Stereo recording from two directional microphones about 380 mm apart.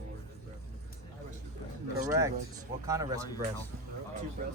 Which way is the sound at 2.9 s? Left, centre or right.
Centre.